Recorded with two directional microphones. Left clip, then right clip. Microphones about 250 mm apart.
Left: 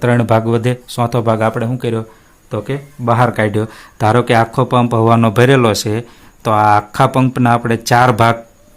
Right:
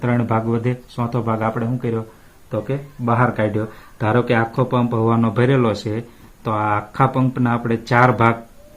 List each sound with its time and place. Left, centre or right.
0.0 s speech: left